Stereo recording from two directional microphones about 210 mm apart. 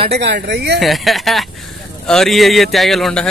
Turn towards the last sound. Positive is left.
turn(degrees=0)  # may be behind; listen again after turning